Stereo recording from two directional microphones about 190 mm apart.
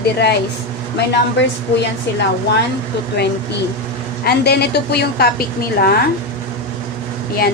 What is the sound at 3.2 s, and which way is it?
A woman's voice, 60° left (ahead or behind).